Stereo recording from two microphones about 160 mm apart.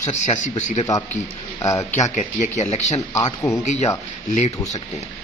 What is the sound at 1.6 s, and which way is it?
Speech, 20° left (ahead or behind).